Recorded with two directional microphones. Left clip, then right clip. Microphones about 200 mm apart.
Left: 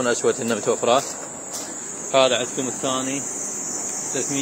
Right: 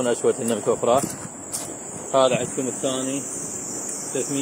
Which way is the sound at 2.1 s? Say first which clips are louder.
Left 1 dB; 5° right (ahead or behind).